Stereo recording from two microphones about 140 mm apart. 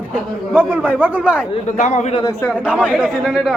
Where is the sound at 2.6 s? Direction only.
10° right (ahead or behind).